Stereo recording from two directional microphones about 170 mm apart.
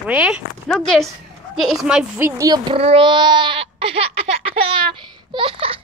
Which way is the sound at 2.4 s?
20° right (ahead or behind).